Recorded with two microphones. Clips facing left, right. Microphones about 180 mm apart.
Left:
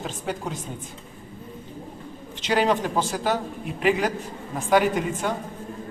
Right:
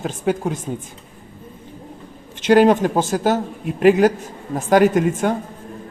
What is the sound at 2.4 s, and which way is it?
Speech, 50° right (ahead or behind).